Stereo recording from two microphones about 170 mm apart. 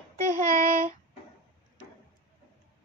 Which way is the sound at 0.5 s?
55° right (ahead or behind).